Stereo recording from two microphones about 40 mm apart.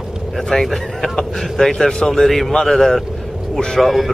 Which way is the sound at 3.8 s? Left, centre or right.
Centre.